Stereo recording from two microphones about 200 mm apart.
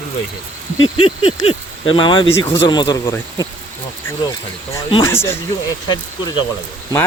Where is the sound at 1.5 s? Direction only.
25° left (ahead or behind).